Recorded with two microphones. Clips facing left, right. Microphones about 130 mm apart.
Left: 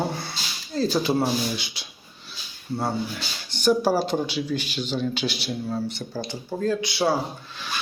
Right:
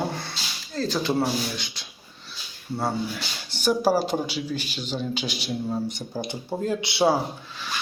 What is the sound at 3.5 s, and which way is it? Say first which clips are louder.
Speech: left 1 dB; 10° right (ahead or behind).